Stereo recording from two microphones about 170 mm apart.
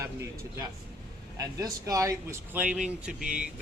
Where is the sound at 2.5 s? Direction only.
10° right (ahead or behind).